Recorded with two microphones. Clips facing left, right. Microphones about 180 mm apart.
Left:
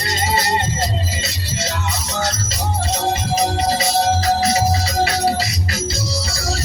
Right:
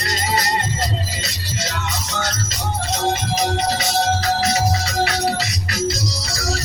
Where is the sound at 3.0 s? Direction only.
30° left (ahead or behind).